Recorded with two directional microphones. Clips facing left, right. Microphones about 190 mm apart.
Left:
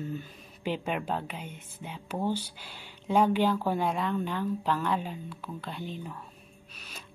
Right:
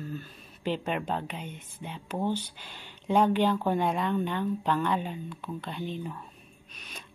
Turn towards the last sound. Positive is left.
turn(degrees=5)  # may be behind; listen again after turning